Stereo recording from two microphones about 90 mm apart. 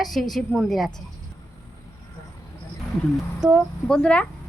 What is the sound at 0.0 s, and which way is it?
A woman's voice, centre (ahead or behind).